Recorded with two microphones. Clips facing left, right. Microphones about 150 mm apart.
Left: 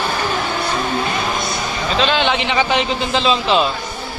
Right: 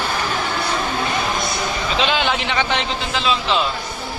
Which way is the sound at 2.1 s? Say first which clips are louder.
Left 3 dB; 5° right (ahead or behind).